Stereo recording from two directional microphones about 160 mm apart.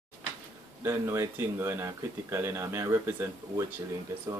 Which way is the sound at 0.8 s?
15° right (ahead or behind).